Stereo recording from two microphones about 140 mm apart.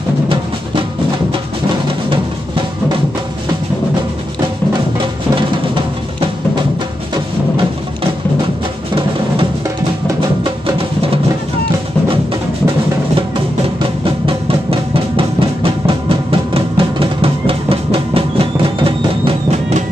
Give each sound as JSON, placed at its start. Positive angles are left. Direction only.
{"t": 10.4, "sound": "music", "side_deg": -35}
{"t": 13.7, "sound": "drum", "side_deg": -40}